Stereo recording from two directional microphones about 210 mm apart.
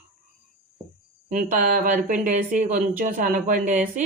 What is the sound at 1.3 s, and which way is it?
A woman's voice, 40° right (ahead or behind).